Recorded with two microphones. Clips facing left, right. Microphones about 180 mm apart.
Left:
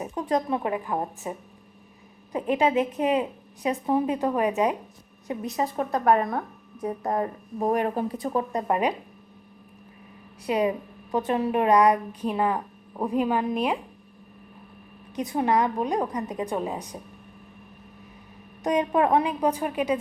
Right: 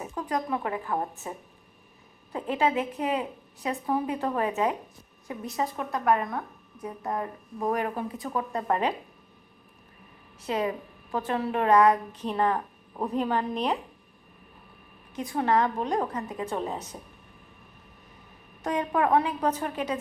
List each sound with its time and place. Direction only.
0.0 s a woman's voice: 20° left (ahead or behind)
2.3 s a woman's voice: 20° left (ahead or behind)
5.7 s a woman's voice: 35° left (ahead or behind)
7.6 s a woman's voice: 25° left (ahead or behind)
8.5 s a woman's voice: 15° left (ahead or behind)
10.4 s a woman's voice: 15° left (ahead or behind)
15.1 s a woman's voice: 20° left (ahead or behind)
18.6 s a woman's voice: 20° left (ahead or behind)